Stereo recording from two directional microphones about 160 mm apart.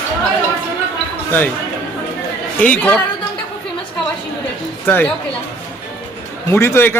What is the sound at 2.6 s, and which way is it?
Speech, 10° left (ahead or behind).